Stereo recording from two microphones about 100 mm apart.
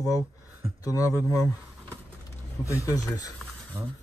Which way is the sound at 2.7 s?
30° left (ahead or behind).